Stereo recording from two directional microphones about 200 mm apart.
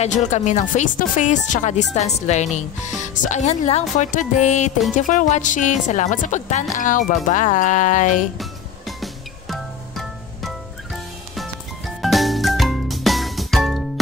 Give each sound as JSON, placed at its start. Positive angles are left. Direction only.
{"t": 0.0, "sound": "speech", "side_deg": 35}
{"t": 8.4, "sound": "music", "side_deg": 0}